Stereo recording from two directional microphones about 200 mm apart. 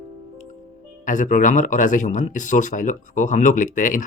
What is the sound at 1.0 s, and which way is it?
Speech, 40° left (ahead or behind).